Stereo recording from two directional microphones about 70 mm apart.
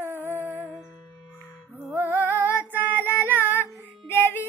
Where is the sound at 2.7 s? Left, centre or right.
Right.